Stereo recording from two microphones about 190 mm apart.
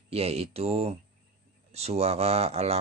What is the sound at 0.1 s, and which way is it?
Speech, 35° right (ahead or behind).